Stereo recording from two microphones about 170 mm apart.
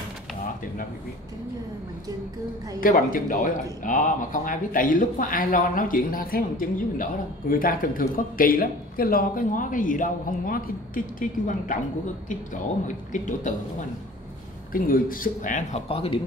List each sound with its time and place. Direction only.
2.8 s speech: 55° left (ahead or behind)
12.8 s speech: 50° left (ahead or behind)
14.7 s speech: 55° left (ahead or behind)
15.9 s speech: 35° left (ahead or behind)